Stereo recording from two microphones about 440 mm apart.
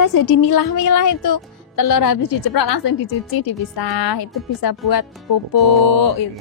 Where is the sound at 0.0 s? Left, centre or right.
Left.